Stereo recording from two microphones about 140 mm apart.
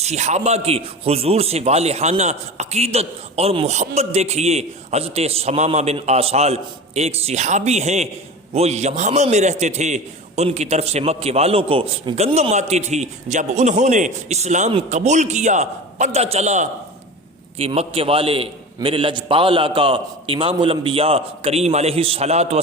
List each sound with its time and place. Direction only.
0.0 s a man's voice: 50° right (ahead or behind)